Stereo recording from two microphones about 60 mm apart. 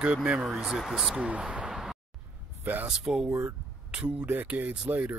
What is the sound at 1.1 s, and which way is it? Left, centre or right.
Speech, centre.